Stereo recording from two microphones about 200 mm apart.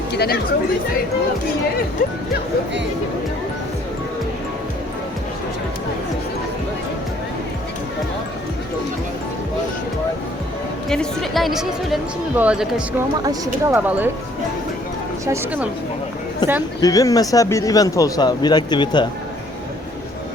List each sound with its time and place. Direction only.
0.1 s speech: 55° left (ahead or behind)
10.8 s speech: 5° left (ahead or behind)
13.2 s speech: 15° right (ahead or behind)
15.3 s speech: 10° right (ahead or behind)
16.4 s speech: 20° left (ahead or behind)